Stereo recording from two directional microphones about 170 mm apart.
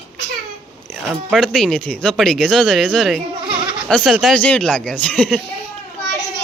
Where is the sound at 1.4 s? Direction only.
5° left (ahead or behind).